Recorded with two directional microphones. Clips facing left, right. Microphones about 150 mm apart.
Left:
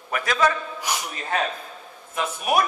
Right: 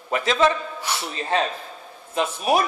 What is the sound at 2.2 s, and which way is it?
Speech, 30° right (ahead or behind).